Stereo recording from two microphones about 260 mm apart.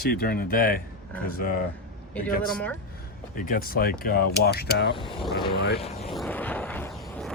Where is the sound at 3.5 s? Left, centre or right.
Left.